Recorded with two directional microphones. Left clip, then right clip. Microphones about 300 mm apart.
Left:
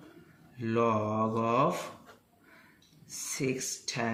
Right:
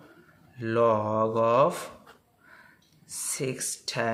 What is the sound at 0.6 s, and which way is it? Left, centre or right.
Speech, right.